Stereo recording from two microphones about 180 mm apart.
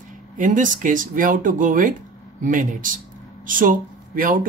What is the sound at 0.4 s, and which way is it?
Speech, 45° right (ahead or behind).